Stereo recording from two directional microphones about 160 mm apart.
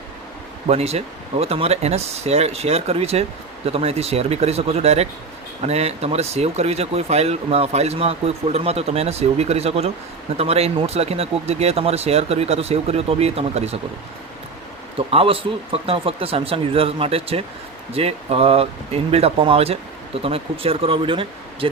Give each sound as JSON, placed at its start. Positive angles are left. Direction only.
{"t": 0.7, "sound": "speech", "side_deg": -40}
{"t": 14.9, "sound": "speech", "side_deg": -35}